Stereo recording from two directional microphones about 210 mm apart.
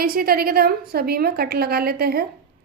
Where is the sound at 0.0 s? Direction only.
45° right (ahead or behind).